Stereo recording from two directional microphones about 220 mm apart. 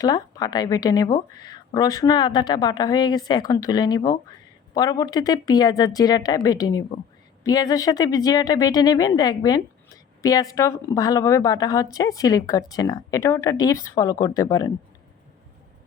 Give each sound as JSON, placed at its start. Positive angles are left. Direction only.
{"t": 0.0, "sound": "speech", "side_deg": 15}